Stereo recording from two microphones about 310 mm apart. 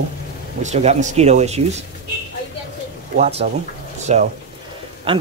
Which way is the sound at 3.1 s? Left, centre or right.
Centre.